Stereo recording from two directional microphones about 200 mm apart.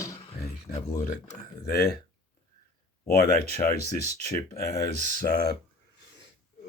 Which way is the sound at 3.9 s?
35° right (ahead or behind).